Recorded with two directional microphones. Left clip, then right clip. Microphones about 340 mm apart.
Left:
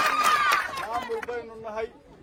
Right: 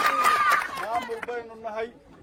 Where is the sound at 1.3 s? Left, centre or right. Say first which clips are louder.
Right 1 dB; right.